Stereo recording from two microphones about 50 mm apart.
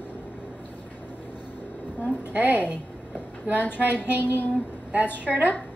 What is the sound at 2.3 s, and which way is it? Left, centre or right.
Speech, right.